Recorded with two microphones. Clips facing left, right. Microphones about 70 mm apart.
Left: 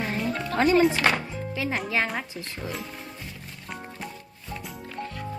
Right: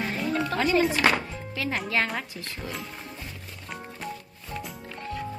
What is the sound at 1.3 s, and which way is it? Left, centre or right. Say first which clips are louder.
Music: left 2 dB; centre.